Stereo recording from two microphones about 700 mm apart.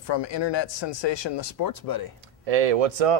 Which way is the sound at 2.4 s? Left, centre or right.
Right.